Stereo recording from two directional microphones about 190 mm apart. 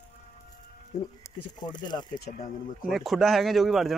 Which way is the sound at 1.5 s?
20° left (ahead or behind).